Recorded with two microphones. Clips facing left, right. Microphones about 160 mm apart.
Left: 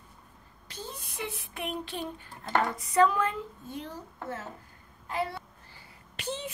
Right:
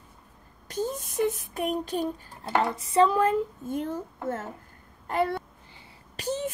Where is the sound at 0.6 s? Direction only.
45° right (ahead or behind).